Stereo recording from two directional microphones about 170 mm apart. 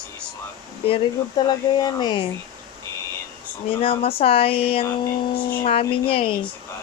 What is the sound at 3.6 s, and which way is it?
Speech, 35° left (ahead or behind).